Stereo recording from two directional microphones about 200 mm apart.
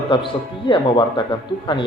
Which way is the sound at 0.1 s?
25° left (ahead or behind).